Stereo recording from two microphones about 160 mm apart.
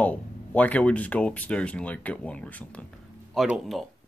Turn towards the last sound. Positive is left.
turn(degrees=0)  # may be behind; listen again after turning